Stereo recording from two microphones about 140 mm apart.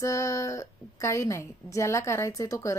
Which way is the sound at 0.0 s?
20° left (ahead or behind).